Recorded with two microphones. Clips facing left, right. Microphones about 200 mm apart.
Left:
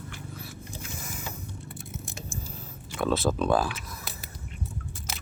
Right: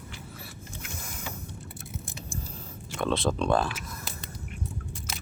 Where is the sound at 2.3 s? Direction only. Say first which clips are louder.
Even; centre (ahead or behind).